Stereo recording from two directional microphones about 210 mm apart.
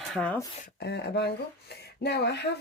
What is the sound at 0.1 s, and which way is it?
Speech, 5° left (ahead or behind).